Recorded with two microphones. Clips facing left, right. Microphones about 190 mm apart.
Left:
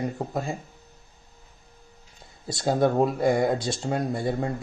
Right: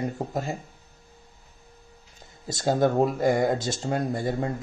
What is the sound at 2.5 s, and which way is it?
Speech, 45° right (ahead or behind).